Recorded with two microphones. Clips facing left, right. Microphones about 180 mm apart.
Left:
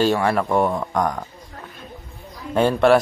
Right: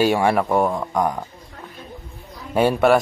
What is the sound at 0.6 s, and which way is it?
Speech, centre (ahead or behind).